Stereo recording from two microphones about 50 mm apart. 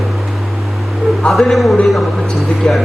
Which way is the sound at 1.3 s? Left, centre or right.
Centre.